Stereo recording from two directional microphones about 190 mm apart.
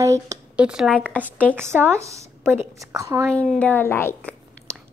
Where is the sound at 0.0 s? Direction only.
15° right (ahead or behind).